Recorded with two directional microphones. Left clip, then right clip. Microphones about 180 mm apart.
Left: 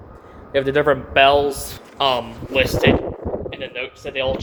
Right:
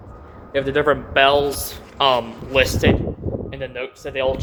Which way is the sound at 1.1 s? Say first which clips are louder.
Left 2 dB; centre (ahead or behind).